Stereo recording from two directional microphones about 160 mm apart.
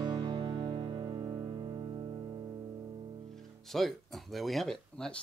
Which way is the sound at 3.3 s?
Centre (ahead or behind).